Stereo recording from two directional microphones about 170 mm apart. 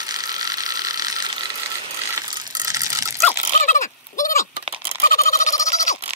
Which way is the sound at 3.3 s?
45° left (ahead or behind).